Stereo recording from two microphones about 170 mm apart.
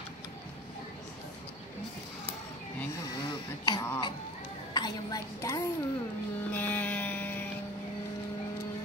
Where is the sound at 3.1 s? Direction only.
25° left (ahead or behind).